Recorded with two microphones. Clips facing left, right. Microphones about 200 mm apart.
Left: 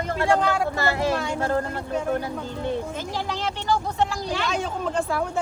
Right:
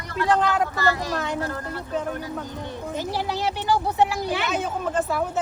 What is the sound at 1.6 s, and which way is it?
Speech, 45° left (ahead or behind).